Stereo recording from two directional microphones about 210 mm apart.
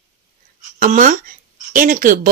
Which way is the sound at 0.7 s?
40° right (ahead or behind).